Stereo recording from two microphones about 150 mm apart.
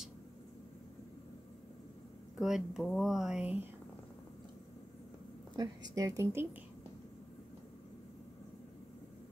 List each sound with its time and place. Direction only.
2.3 s speech: 5° right (ahead or behind)
5.6 s a woman's voice: 25° right (ahead or behind)